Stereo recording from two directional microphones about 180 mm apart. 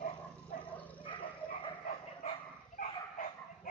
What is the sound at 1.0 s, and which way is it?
Dog, 25° left (ahead or behind).